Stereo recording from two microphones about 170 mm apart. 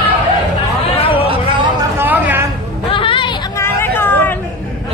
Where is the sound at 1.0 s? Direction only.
35° left (ahead or behind).